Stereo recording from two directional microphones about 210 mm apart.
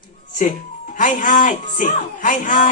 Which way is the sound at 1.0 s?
40° left (ahead or behind).